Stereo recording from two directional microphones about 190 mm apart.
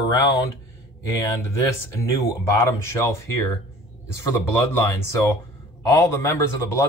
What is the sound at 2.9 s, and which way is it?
Speech, 15° left (ahead or behind).